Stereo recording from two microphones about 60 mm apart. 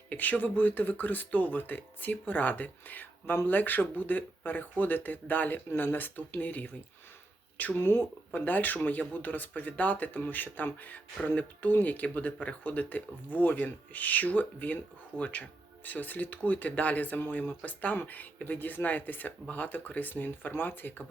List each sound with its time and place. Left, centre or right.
0.1 s speech: left
7.8 s speech: left